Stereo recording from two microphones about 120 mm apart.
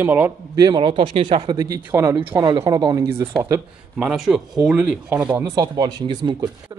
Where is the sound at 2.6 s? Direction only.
35° right (ahead or behind).